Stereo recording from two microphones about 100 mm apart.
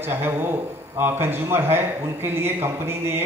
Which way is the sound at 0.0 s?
25° right (ahead or behind).